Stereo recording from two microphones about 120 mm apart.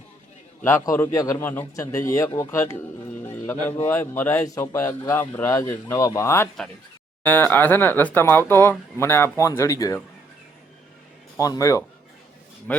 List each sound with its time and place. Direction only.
0.6 s a man's voice: 20° left (ahead or behind)
11.3 s a man's voice: 30° left (ahead or behind)
12.7 s speech: 15° left (ahead or behind)